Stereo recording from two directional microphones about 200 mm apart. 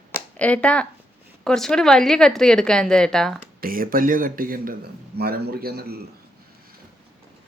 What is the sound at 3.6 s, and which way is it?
Speech, 45° right (ahead or behind).